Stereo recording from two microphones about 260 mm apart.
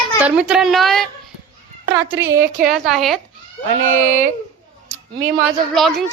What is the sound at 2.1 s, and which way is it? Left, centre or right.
Speech, centre.